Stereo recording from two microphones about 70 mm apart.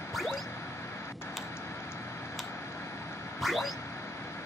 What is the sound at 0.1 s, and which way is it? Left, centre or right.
Music, centre.